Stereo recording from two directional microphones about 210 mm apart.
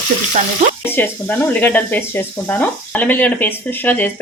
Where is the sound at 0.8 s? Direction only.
10° left (ahead or behind).